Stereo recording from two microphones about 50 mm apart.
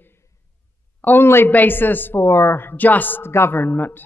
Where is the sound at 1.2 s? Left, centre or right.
Left.